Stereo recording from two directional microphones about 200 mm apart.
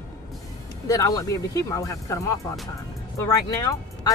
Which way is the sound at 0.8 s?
15° left (ahead or behind).